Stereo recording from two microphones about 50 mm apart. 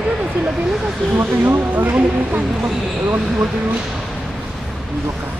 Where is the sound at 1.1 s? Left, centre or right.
Right.